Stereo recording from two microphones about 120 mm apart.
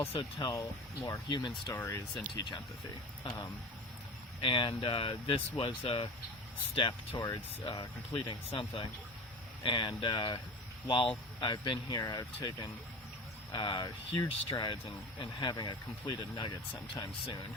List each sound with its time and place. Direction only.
0.2 s speech: 40° left (ahead or behind)
0.5 s speech: 25° left (ahead or behind)
1.3 s speech: 40° left (ahead or behind)
1.7 s speech: 20° left (ahead or behind)
3.2 s speech: 35° left (ahead or behind)
7.7 s speech: 45° left (ahead or behind)